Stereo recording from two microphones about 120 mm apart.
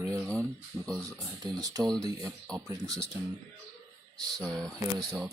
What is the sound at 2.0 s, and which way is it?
Speech, 30° right (ahead or behind).